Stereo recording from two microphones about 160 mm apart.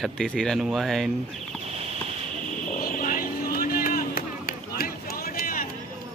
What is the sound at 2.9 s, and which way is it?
Vehicle, 60° left (ahead or behind).